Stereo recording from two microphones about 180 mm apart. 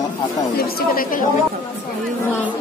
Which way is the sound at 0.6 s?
55° left (ahead or behind).